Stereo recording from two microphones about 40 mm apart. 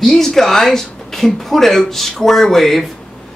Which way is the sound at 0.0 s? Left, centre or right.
Centre.